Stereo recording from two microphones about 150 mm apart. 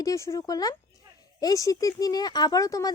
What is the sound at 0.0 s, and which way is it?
Speech, 20° left (ahead or behind).